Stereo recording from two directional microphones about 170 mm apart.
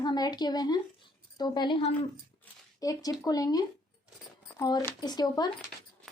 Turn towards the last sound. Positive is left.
turn(degrees=25)  # may be behind; listen again after turning